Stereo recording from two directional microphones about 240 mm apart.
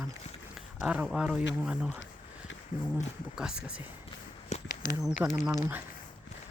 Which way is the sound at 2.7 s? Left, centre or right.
Left.